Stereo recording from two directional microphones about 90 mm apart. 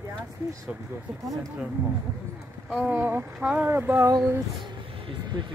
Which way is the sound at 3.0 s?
25° right (ahead or behind).